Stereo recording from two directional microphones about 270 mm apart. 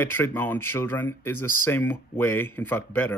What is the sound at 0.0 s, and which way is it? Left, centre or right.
Speech, centre.